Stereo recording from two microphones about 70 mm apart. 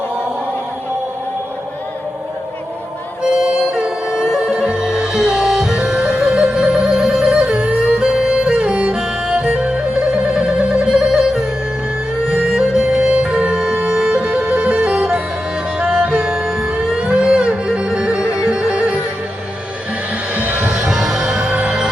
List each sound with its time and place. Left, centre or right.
3.2 s music: centre
20.3 s music: right
20.7 s music: centre
21.5 s music: right